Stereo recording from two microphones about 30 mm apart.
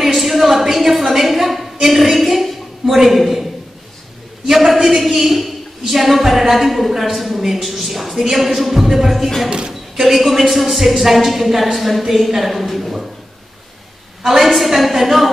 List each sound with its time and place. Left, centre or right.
0.0 s a sound: centre
4.5 s a sound: centre
7.0 s a woman's voice: centre
9.5 s a man's voice: right
9.9 s a woman's voice: centre
14.2 s a woman's voice: centre